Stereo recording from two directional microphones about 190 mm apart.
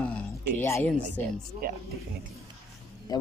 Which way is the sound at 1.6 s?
55° right (ahead or behind).